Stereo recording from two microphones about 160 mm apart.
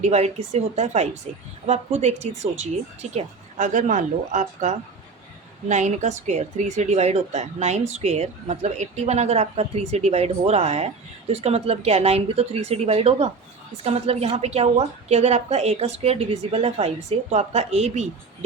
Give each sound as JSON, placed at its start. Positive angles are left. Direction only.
{"t": 0.0, "sound": "speech", "side_deg": -45}